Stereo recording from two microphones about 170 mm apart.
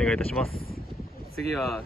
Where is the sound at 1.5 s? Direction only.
Centre (ahead or behind).